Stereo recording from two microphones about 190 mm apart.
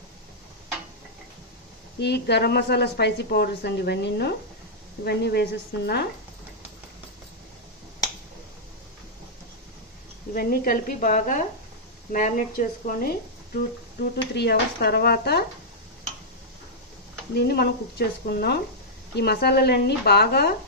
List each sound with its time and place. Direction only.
2.0 s a woman's voice: 65° left (ahead or behind)
10.3 s a woman's voice: 50° left (ahead or behind)
14.3 s a woman's voice: 60° left (ahead or behind)
17.3 s a woman's voice: 60° left (ahead or behind)